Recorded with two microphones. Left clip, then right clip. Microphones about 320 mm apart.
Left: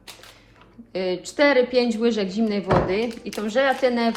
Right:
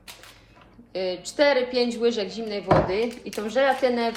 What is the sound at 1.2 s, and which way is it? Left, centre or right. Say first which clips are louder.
A woman's voice: left 2 dB; centre.